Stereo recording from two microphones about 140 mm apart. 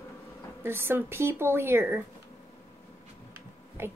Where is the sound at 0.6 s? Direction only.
15° right (ahead or behind).